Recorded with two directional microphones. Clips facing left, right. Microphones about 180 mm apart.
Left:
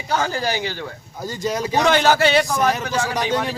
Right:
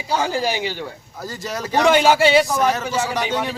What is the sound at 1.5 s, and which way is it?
Speech, 15° left (ahead or behind).